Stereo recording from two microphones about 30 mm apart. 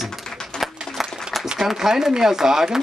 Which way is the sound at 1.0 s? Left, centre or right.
Centre.